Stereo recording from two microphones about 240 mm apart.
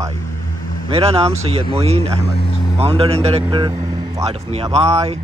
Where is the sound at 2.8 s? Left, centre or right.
Right.